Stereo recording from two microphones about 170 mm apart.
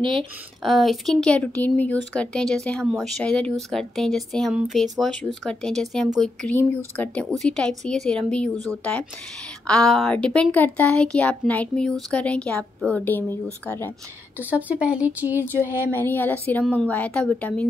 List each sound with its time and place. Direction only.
0.0 s speech: 30° right (ahead or behind)
0.6 s speech: centre (ahead or behind)
14.4 s speech: 10° right (ahead or behind)
15.9 s speech: 10° left (ahead or behind)